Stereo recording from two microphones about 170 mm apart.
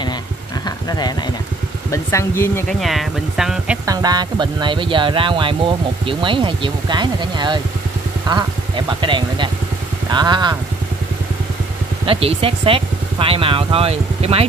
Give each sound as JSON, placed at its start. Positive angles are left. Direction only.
{"t": 0.7, "sound": "a sound", "side_deg": 25}
{"t": 1.9, "sound": "speech", "side_deg": 15}
{"t": 2.8, "sound": "speech", "side_deg": 0}
{"t": 3.8, "sound": "speech", "side_deg": -20}
{"t": 12.1, "sound": "speech", "side_deg": -35}